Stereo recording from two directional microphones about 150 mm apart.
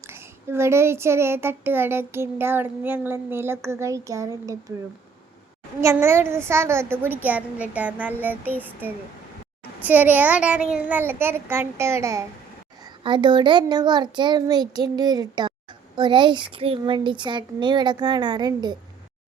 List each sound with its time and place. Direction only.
0.1 s speech: 15° right (ahead or behind)
5.8 s speech: 15° right (ahead or behind)
13.0 s a child's voice: 30° right (ahead or behind)